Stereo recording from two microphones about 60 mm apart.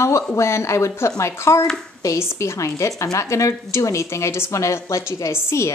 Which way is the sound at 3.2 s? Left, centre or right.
Left.